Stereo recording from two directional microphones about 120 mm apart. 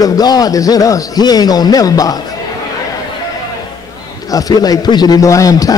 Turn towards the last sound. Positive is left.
turn(degrees=30)  # may be behind; listen again after turning